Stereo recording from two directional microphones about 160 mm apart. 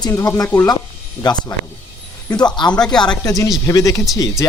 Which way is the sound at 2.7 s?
5° left (ahead or behind).